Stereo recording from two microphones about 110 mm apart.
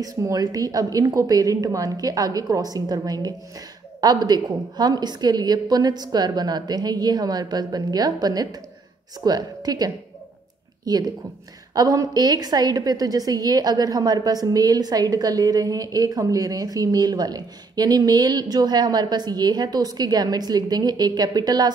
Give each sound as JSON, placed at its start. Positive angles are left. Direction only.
{"t": 0.0, "sound": "a woman's voice", "side_deg": -35}